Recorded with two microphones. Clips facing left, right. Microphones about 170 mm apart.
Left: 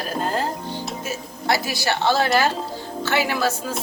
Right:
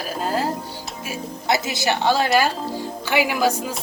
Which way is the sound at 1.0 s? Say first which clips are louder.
Right 3 dB; 15° right (ahead or behind).